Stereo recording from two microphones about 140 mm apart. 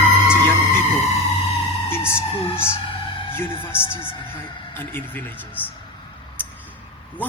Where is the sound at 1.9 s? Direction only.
15° left (ahead or behind).